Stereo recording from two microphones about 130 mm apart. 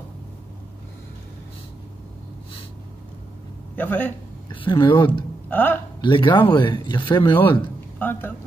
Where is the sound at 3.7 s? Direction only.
15° left (ahead or behind).